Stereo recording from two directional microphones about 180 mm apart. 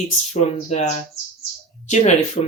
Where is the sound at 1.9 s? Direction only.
40° left (ahead or behind).